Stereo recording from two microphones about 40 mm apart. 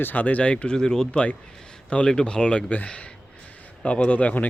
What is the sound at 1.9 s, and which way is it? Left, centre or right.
Speech, left.